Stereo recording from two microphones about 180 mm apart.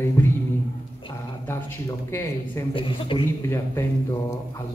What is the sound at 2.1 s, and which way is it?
Speech, 15° left (ahead or behind).